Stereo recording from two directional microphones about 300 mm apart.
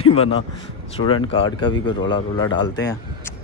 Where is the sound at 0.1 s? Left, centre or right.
Centre.